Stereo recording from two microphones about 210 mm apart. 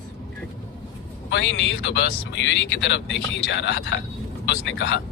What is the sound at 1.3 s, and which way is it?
Speech, 60° left (ahead or behind).